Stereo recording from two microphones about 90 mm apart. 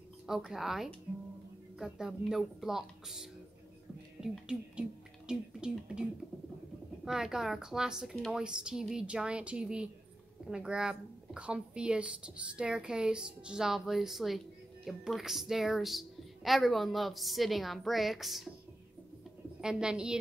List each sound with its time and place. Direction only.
0.5 s a woman's voice: 5° right (ahead or behind)
7.1 s a woman's voice: 5° right (ahead or behind)
19.6 s a woman's voice: 10° right (ahead or behind)